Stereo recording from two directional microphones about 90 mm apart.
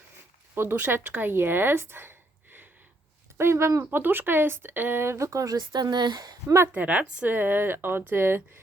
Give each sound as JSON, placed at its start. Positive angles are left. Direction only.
{"t": 0.5, "sound": "speech", "side_deg": -25}
{"t": 6.7, "sound": "a woman's voice", "side_deg": -15}